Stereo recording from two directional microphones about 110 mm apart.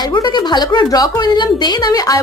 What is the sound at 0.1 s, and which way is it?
A woman's voice, 40° left (ahead or behind).